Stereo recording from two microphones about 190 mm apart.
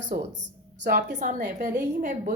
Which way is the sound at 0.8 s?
65° right (ahead or behind).